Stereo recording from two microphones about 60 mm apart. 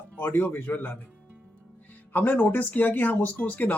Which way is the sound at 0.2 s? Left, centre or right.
Left.